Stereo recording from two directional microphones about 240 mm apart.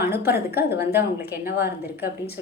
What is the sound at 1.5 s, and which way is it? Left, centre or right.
Speech, left.